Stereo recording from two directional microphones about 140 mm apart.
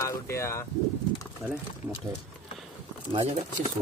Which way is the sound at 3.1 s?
40° right (ahead or behind).